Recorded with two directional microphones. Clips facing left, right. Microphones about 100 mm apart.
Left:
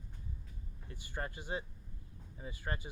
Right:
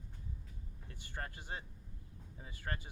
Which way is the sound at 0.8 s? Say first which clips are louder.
Left 4 dB; 10° left (ahead or behind).